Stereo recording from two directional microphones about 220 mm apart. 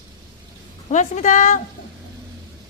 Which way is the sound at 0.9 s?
35° left (ahead or behind).